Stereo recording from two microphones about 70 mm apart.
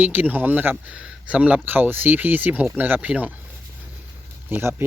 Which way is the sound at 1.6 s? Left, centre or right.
Right.